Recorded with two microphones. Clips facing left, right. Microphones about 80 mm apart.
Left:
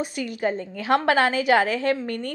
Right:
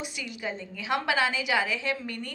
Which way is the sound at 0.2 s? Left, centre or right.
Left.